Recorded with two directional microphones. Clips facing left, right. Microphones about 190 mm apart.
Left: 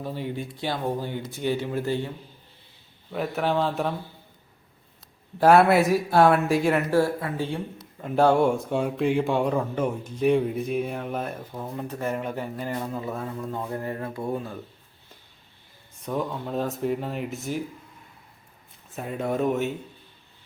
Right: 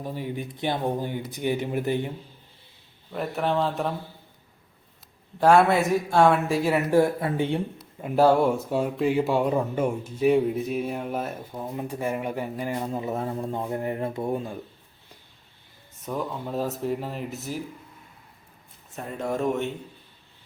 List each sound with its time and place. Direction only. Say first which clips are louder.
0.0 s speech: even; 15° right (ahead or behind)
3.1 s speech: left 1 dB; centre (ahead or behind)
5.4 s speech: left 1 dB; 5° left (ahead or behind)
6.9 s speech: right 2 dB; 20° right (ahead or behind)
7.8 s speech: even; 5° right (ahead or behind)
16.0 s speech: left 2 dB; centre (ahead or behind)
18.9 s speech: left 2 dB; 5° left (ahead or behind)